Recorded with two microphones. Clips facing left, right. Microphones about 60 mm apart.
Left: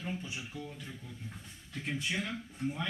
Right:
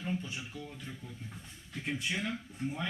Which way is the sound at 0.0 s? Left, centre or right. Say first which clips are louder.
Right 2 dB; centre.